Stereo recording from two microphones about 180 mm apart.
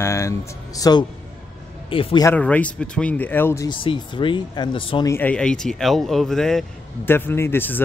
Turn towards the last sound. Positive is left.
turn(degrees=10)  # may be behind; listen again after turning